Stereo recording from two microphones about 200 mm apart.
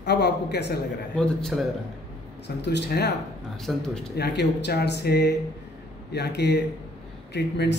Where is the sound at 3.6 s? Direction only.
5° left (ahead or behind).